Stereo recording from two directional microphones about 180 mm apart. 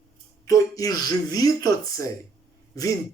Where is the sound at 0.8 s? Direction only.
20° left (ahead or behind).